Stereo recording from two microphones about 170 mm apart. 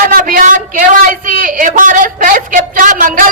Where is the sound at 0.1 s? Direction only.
55° right (ahead or behind).